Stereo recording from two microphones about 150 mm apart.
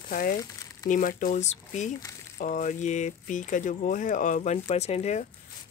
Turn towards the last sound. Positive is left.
turn(degrees=50)  # may be behind; listen again after turning